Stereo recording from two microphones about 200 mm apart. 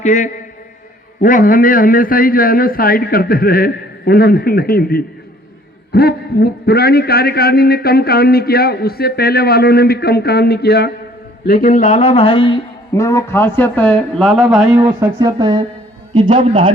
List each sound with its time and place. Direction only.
0.0 s a man's voice: 35° left (ahead or behind)
12.9 s speech: 15° left (ahead or behind)
14.8 s speech: 20° right (ahead or behind)